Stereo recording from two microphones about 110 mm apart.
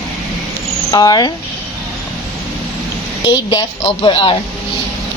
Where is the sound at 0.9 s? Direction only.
35° left (ahead or behind).